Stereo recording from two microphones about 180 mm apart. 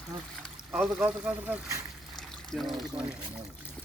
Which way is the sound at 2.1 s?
Centre (ahead or behind).